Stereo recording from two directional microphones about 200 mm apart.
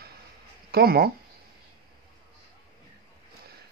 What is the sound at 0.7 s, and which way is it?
Speech, 50° right (ahead or behind).